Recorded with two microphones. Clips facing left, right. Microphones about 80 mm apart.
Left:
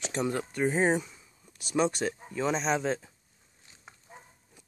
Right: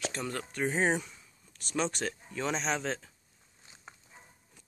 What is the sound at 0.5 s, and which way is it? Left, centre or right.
Speech, centre.